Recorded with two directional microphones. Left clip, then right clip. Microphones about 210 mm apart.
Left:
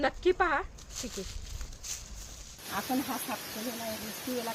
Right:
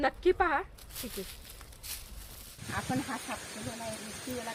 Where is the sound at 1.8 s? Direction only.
35° right (ahead or behind).